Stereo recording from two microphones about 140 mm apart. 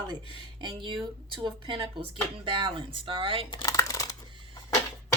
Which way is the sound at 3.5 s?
30° left (ahead or behind).